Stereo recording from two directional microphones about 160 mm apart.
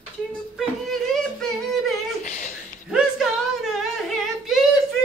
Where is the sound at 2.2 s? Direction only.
50° left (ahead or behind).